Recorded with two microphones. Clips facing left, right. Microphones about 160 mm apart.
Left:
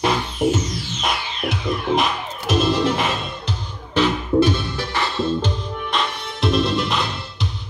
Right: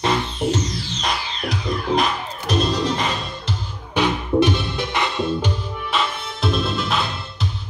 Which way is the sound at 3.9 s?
15° right (ahead or behind).